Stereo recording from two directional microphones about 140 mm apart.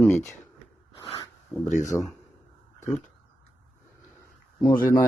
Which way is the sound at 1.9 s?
10° left (ahead or behind).